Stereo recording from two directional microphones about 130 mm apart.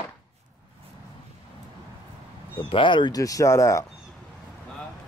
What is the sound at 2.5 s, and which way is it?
Speech, 40° left (ahead or behind).